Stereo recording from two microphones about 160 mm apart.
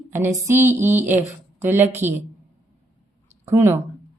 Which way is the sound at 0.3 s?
15° right (ahead or behind).